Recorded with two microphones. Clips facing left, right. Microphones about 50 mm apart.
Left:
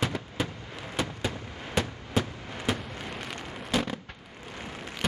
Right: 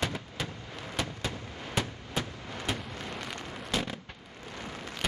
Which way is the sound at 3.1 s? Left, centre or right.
Centre.